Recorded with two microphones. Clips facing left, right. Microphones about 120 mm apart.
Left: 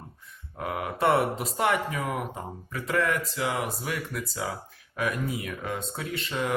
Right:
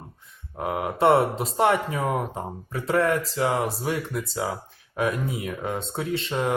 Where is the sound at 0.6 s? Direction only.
25° right (ahead or behind).